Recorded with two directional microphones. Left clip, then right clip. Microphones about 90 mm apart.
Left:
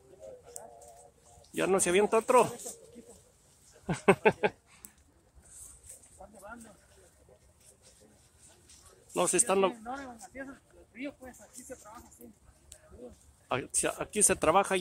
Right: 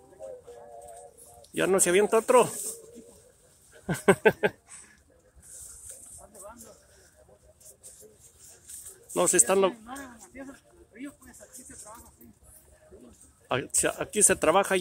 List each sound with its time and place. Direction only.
1.8 s speech: 20° right (ahead or behind)
3.8 s speech: 15° right (ahead or behind)
9.1 s speech: 20° right (ahead or behind)
13.5 s speech: 20° right (ahead or behind)